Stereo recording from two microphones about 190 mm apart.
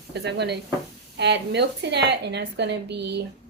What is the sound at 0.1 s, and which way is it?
A woman's voice, 60° right (ahead or behind).